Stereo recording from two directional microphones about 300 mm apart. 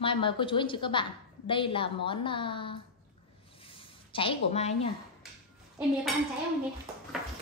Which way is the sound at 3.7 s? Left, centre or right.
Centre.